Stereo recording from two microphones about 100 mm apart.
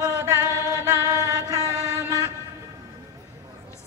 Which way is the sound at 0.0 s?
35° right (ahead or behind).